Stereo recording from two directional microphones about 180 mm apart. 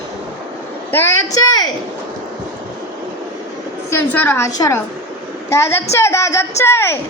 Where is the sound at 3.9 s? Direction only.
10° left (ahead or behind).